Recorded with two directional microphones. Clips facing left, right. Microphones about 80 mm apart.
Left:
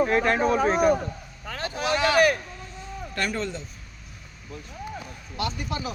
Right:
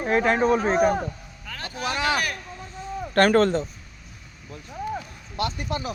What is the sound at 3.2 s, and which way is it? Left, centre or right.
Speech, right.